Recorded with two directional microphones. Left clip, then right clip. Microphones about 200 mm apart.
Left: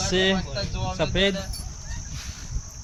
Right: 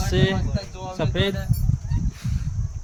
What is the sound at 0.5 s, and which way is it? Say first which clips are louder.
Cricket: left 2 dB; 20° right (ahead or behind).